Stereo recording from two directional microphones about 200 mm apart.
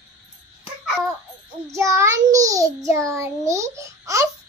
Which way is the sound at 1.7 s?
15° right (ahead or behind).